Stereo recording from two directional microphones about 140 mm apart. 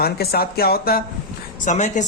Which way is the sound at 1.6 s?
60° left (ahead or behind).